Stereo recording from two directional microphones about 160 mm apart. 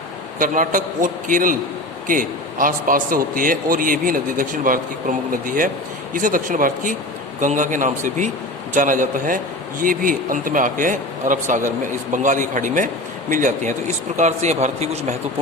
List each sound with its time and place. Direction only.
0.3 s a man's voice: 55° right (ahead or behind)